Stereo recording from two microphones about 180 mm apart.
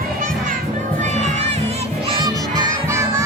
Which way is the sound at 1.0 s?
40° right (ahead or behind).